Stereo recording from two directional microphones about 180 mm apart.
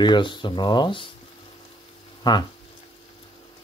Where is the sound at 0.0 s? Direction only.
25° left (ahead or behind).